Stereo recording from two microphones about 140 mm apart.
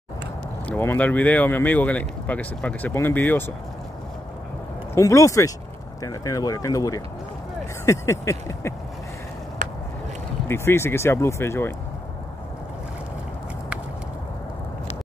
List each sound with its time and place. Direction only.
0.7 s speech: 15° left (ahead or behind)
4.9 s speech: 25° left (ahead or behind)
9.6 s a sound: 70° right (ahead or behind)
10.5 s speech: 15° left (ahead or behind)